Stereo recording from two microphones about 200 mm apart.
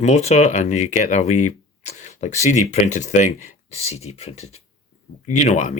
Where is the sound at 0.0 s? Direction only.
35° left (ahead or behind).